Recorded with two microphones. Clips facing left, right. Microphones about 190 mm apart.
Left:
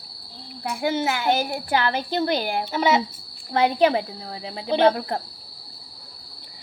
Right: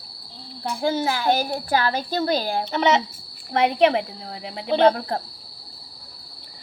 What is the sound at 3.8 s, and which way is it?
Speech, 25° right (ahead or behind).